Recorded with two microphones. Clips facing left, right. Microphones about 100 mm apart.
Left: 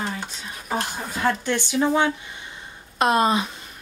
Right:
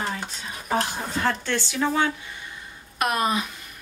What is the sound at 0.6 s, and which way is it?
Speech, centre (ahead or behind).